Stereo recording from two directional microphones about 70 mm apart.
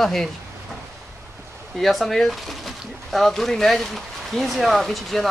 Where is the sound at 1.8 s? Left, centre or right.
Centre.